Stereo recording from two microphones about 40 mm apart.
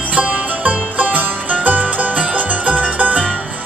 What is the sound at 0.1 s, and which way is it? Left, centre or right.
Music, right.